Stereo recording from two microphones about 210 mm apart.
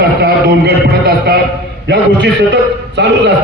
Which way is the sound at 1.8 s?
55° right (ahead or behind).